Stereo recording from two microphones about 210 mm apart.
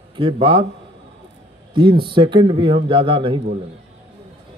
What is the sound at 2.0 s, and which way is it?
Speech, 25° right (ahead or behind).